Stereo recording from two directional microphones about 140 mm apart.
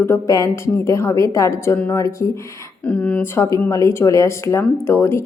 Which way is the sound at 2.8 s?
10° left (ahead or behind).